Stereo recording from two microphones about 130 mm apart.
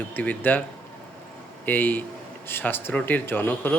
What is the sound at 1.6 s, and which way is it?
Speech, 15° left (ahead or behind).